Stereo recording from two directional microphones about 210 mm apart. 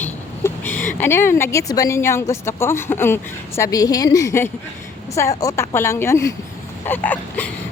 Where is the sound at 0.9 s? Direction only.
10° left (ahead or behind).